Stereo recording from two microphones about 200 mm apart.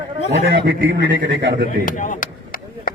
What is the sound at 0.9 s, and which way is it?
Speech, 60° right (ahead or behind).